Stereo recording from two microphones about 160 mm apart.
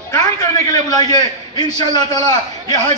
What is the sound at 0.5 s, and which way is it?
A man's voice, 20° left (ahead or behind).